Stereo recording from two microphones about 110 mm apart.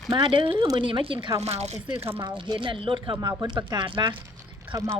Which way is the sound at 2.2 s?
45° right (ahead or behind).